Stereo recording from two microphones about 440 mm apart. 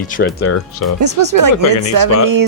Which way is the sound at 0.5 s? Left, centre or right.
Left.